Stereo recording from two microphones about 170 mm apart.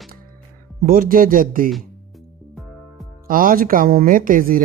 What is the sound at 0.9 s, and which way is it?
Speech, 55° right (ahead or behind).